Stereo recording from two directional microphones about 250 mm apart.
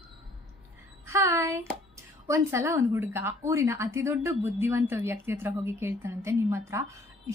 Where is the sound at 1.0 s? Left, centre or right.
Centre.